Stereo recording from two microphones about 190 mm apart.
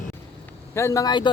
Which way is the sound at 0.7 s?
15° left (ahead or behind).